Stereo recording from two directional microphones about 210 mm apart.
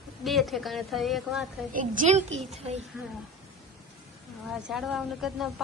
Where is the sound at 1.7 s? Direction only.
40° right (ahead or behind).